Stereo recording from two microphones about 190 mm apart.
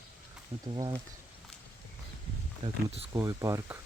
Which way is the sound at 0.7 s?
20° right (ahead or behind).